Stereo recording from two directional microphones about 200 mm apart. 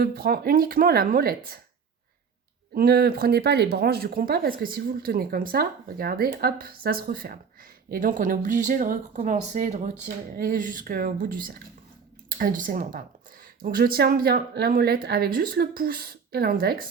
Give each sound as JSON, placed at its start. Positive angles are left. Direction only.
{"t": 0.0, "sound": "speech", "side_deg": -50}
{"t": 2.7, "sound": "speech", "side_deg": -50}